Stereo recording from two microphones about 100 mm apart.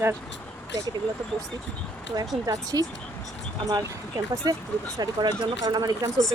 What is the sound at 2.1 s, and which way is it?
Speech, 40° right (ahead or behind).